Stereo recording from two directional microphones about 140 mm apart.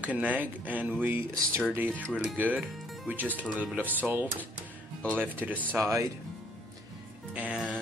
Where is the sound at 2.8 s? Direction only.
Centre (ahead or behind).